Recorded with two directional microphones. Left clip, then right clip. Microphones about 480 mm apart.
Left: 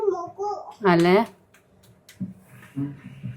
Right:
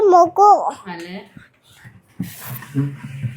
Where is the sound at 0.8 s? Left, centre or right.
Left.